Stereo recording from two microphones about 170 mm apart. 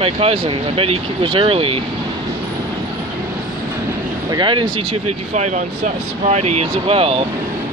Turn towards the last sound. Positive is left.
turn(degrees=-35)  # may be behind; listen again after turning